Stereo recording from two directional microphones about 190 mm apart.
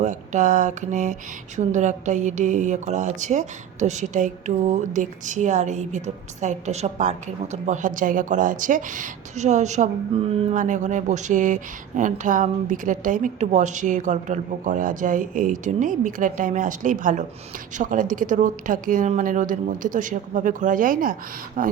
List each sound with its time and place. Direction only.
0.0 s a woman's voice: 40° right (ahead or behind)